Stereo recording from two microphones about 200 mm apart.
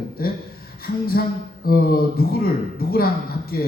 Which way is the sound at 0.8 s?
50° left (ahead or behind).